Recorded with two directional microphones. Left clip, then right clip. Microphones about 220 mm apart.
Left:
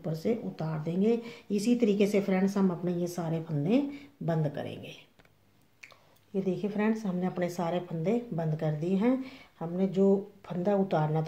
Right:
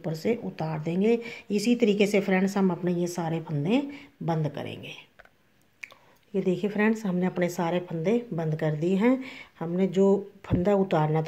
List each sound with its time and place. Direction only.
0.0 s speech: 30° right (ahead or behind)